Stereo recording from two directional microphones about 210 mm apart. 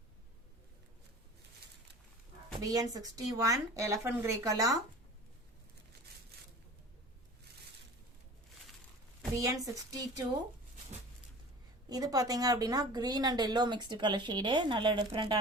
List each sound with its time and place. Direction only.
2.6 s speech: 15° right (ahead or behind)
9.3 s speech: 15° right (ahead or behind)
11.9 s speech: 20° right (ahead or behind)